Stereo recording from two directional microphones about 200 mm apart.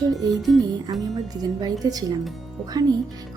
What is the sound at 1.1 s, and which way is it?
Speech, 20° right (ahead or behind).